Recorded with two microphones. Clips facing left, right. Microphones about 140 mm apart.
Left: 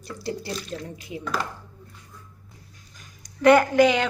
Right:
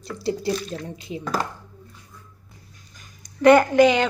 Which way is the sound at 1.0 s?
25° right (ahead or behind).